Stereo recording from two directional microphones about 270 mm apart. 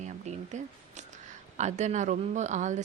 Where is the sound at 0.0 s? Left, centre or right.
Right.